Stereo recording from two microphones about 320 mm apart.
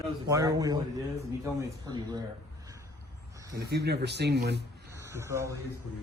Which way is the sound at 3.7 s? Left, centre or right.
Right.